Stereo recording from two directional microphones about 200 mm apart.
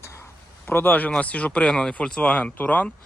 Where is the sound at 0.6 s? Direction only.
10° left (ahead or behind).